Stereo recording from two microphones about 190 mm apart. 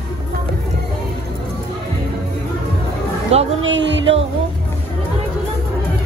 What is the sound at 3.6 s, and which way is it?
Music, 75° right (ahead or behind).